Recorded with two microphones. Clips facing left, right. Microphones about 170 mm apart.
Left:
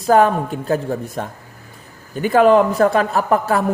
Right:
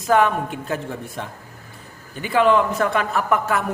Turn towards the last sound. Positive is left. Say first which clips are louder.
# left 4 dB
turn(degrees=35)  # may be behind; listen again after turning